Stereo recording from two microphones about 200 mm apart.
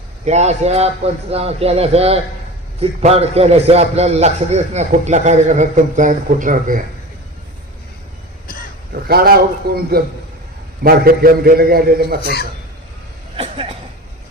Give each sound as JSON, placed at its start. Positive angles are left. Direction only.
{"t": 0.3, "sound": "a man's voice", "side_deg": -35}
{"t": 8.9, "sound": "a man's voice", "side_deg": -50}
{"t": 12.2, "sound": "speech", "side_deg": 50}
{"t": 13.3, "sound": "speech", "side_deg": -30}